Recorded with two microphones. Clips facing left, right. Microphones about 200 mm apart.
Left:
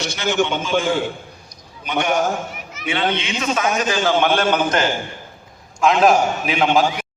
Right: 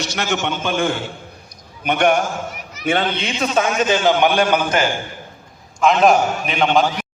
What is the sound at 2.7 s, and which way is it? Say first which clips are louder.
Speech: right 2 dB; 40° right (ahead or behind).